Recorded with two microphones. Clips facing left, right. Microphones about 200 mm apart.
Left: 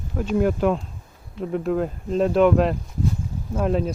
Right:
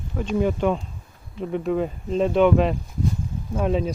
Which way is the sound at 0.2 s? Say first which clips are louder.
Left 1 dB; centre (ahead or behind).